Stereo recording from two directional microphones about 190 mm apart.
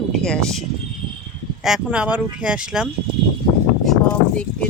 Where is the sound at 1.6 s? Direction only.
5° right (ahead or behind).